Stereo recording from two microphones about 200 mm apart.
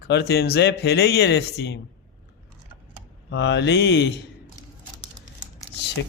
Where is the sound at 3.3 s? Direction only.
60° left (ahead or behind).